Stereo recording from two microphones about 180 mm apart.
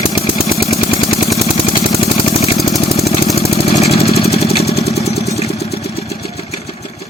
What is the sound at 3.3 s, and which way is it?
Vehicle, 35° left (ahead or behind).